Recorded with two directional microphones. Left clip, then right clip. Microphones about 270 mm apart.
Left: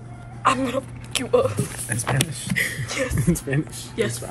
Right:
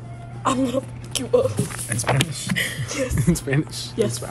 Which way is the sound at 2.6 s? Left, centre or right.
Right.